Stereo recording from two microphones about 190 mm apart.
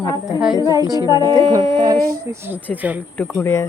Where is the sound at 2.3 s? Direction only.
10° right (ahead or behind).